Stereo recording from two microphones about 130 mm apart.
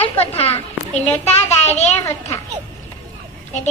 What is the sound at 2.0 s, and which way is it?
Speech, 25° left (ahead or behind).